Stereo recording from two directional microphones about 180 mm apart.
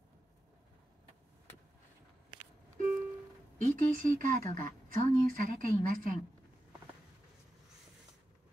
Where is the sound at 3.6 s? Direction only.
45° right (ahead or behind).